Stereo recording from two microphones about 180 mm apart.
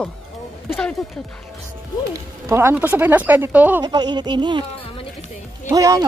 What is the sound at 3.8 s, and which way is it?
Speech, 20° right (ahead or behind).